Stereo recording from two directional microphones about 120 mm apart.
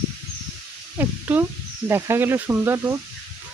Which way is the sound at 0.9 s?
20° right (ahead or behind).